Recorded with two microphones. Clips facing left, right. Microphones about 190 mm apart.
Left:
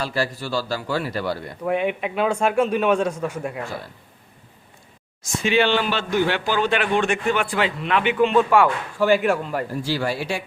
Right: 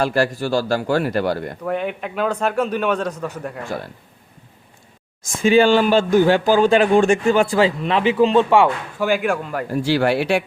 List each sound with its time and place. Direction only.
0.0 s speech: 50° right (ahead or behind)
1.6 s a man's voice: 5° left (ahead or behind)
5.4 s speech: 45° right (ahead or behind); by 8.7 s 25° right (ahead or behind)
9.0 s speech: centre (ahead or behind)
9.7 s speech: 65° right (ahead or behind)